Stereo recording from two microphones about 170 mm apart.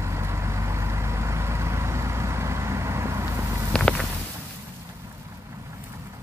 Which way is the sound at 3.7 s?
5° left (ahead or behind).